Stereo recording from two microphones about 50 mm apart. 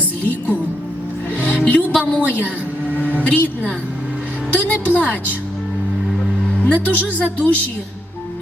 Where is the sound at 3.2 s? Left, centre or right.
Left.